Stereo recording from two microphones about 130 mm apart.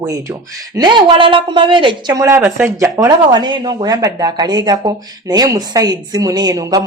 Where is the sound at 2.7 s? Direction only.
25° right (ahead or behind).